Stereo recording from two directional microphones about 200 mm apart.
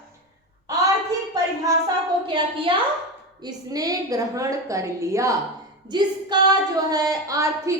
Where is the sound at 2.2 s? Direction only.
25° right (ahead or behind).